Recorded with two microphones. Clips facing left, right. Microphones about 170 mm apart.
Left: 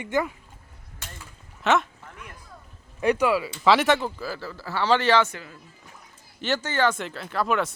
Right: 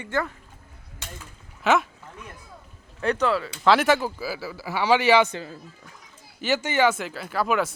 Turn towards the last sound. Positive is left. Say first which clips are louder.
# right 1 dB
turn(degrees=0)  # may be behind; listen again after turning